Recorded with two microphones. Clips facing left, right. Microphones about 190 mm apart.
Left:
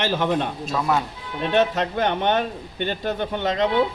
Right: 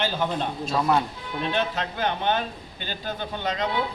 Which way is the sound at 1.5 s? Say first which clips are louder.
Left 8 dB; 65° left (ahead or behind).